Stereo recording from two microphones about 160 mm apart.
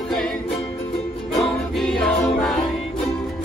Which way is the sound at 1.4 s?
Centre (ahead or behind).